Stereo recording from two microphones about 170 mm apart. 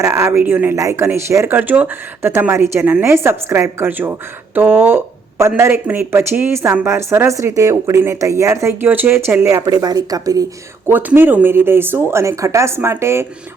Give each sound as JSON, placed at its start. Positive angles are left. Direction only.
{"t": 0.0, "sound": "speech", "side_deg": -15}
{"t": 10.8, "sound": "speech", "side_deg": -10}